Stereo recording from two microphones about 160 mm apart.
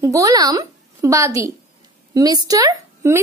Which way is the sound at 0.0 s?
20° right (ahead or behind).